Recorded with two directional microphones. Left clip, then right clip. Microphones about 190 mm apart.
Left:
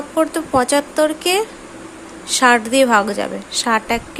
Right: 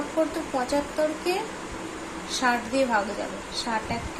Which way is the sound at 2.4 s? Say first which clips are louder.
Left 12 dB; 45° left (ahead or behind).